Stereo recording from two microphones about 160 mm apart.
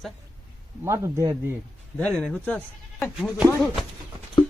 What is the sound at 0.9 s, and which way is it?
Speech, 15° right (ahead or behind).